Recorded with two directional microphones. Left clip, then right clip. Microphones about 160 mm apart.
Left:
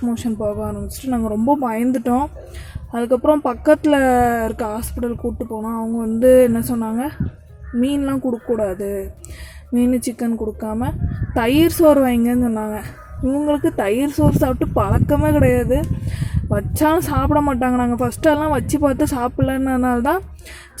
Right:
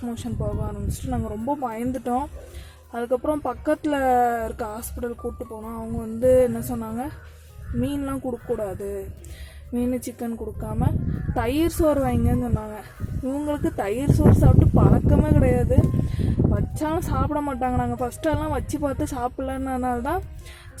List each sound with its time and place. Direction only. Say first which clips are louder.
0.0 s speech: left 9 dB; 15° left (ahead or behind)